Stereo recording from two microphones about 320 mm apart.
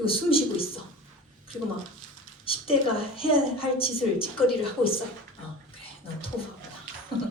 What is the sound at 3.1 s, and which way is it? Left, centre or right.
A woman's voice, centre.